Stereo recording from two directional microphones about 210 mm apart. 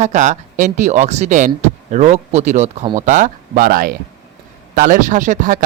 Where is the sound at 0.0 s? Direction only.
35° right (ahead or behind).